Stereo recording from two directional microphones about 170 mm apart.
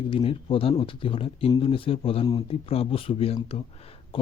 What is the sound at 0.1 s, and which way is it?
Speech, 30° left (ahead or behind).